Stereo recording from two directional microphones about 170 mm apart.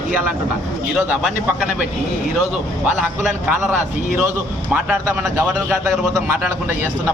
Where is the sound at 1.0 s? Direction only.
10° right (ahead or behind).